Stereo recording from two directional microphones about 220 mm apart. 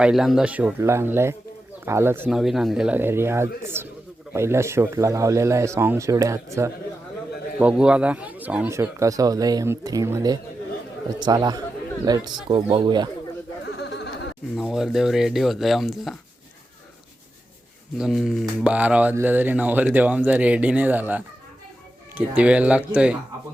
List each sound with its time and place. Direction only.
0.0 s speech: centre (ahead or behind); by 13.1 s 20° right (ahead or behind)
13.7 s a sound: 50° left (ahead or behind)
14.5 s speech: centre (ahead or behind)
17.9 s speech: centre (ahead or behind)